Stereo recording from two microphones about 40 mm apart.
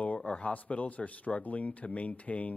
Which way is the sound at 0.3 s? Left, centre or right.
Left.